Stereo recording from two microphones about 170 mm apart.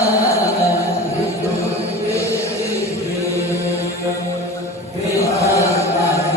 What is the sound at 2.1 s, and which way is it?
Music, 15° left (ahead or behind).